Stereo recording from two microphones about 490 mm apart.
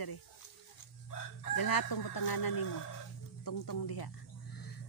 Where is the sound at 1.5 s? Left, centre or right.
Left.